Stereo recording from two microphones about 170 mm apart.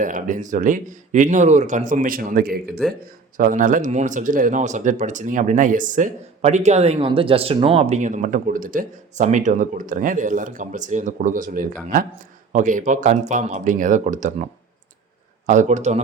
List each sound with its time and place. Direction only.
0.0 s speech: 50° right (ahead or behind)
3.3 s speech: 50° right (ahead or behind)
15.4 s speech: 45° right (ahead or behind)